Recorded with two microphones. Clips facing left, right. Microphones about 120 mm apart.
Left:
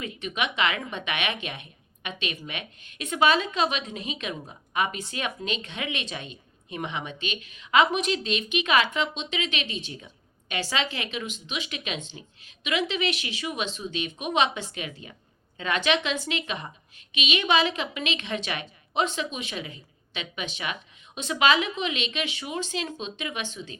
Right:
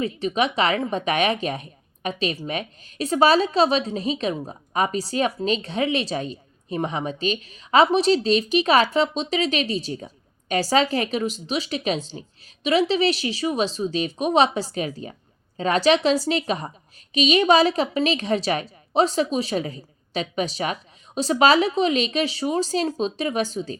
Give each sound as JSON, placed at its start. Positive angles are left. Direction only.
{"t": 0.0, "sound": "a woman's voice", "side_deg": -35}